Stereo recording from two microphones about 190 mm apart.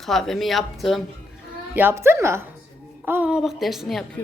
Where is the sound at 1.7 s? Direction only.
10° right (ahead or behind).